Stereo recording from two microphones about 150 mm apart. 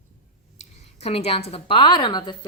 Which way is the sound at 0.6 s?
45° left (ahead or behind).